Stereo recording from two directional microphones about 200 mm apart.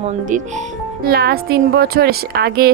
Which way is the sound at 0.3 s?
40° right (ahead or behind).